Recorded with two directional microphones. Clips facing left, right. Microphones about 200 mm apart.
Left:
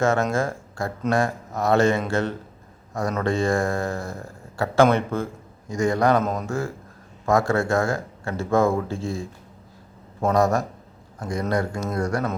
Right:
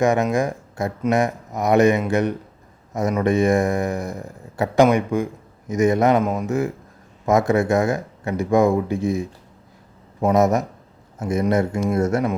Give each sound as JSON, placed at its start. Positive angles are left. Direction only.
{"t": 0.0, "sound": "speech", "side_deg": -15}